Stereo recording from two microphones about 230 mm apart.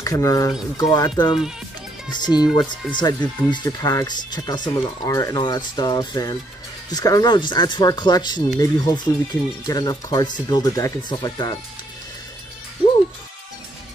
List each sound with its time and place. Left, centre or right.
0.0 s speech: centre